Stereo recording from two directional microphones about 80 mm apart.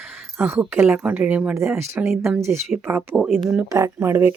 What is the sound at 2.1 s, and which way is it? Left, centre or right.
Speech, centre.